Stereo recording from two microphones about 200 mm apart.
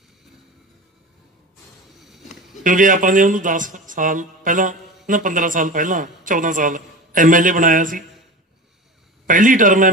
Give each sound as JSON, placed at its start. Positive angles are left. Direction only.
{"t": 2.0, "sound": "a sound", "side_deg": 0}
{"t": 2.6, "sound": "a man's voice", "side_deg": -40}
{"t": 9.2, "sound": "a man's voice", "side_deg": -40}